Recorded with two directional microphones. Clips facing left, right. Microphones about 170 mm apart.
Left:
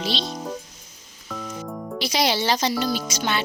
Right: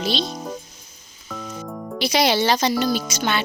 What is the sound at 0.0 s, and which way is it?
Speech, 50° right (ahead or behind).